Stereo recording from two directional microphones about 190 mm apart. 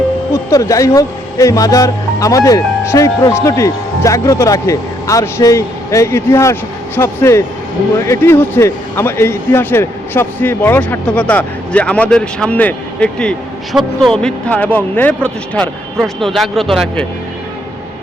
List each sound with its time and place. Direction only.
0.3 s speech: 15° left (ahead or behind)